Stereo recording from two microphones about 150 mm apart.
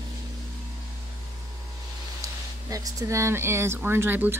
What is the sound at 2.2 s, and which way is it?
Speech, 25° right (ahead or behind).